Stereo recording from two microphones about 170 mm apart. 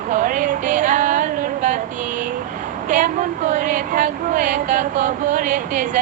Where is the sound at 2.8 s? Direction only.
50° right (ahead or behind).